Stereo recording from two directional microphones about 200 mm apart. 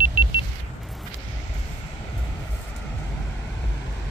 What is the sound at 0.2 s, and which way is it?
Car, 30° left (ahead or behind).